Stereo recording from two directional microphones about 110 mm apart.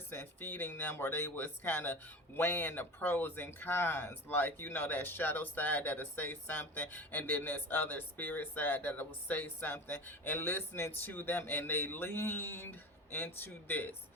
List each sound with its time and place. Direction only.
0.1 s speech: 20° left (ahead or behind)